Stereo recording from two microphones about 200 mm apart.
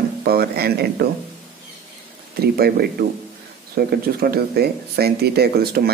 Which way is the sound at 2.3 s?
50° right (ahead or behind).